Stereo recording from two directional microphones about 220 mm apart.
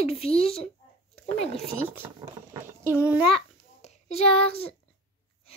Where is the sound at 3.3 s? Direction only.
30° left (ahead or behind).